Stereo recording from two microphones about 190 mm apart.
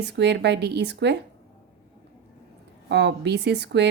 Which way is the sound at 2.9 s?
60° right (ahead or behind).